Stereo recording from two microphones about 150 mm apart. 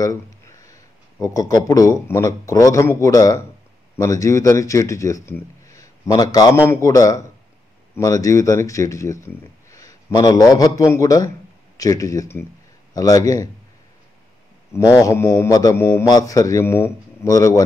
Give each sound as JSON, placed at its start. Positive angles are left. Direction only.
{"t": 0.0, "sound": "a sound", "side_deg": 20}
{"t": 1.2, "sound": "speech", "side_deg": 25}
{"t": 14.7, "sound": "speech", "side_deg": 20}